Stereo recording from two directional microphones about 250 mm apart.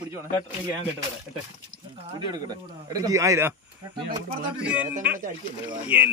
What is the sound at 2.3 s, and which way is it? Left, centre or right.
Speech, centre.